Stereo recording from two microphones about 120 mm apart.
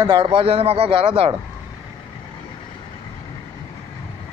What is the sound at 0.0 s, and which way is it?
A man's voice, 45° right (ahead or behind).